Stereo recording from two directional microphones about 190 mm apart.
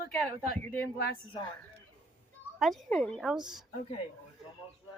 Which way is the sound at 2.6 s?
Centre (ahead or behind).